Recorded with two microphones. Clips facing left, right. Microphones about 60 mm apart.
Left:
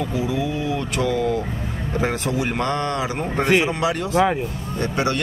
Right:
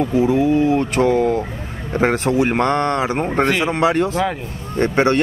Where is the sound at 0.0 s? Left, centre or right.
Right.